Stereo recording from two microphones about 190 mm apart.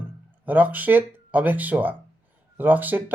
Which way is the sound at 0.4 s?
10° right (ahead or behind).